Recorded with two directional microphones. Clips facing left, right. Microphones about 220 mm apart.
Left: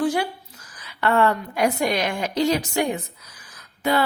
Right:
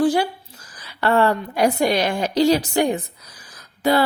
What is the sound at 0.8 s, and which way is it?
A woman's voice, 35° right (ahead or behind).